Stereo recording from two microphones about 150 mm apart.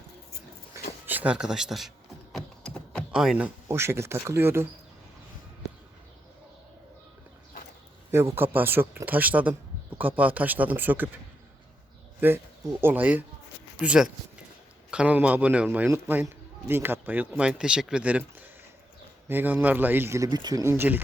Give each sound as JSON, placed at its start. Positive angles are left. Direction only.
{"t": 1.0, "sound": "speech", "side_deg": -10}
{"t": 2.3, "sound": "a sound", "side_deg": 5}
{"t": 3.1, "sound": "a man's voice", "side_deg": -5}
{"t": 8.1, "sound": "a man's voice", "side_deg": -15}
{"t": 12.2, "sound": "a man's voice", "side_deg": -15}